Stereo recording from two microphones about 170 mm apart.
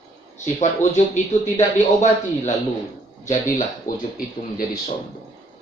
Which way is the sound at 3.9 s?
55° left (ahead or behind).